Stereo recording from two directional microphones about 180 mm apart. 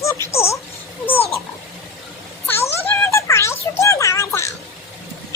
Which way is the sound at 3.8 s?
15° left (ahead or behind).